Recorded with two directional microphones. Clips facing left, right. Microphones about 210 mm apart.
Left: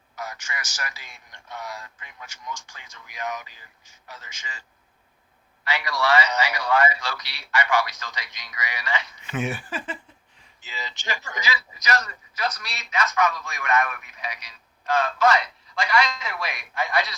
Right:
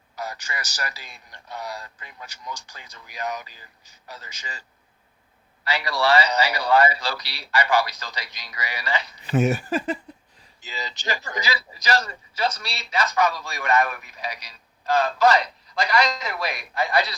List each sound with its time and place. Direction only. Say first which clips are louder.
0.2 s a man's voice: right 2 dB; 35° right (ahead or behind)
5.6 s a man's voice: right 2 dB; 35° right (ahead or behind)